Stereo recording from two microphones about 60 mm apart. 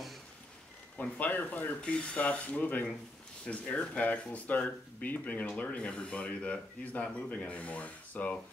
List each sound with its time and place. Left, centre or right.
1.2 s speech: left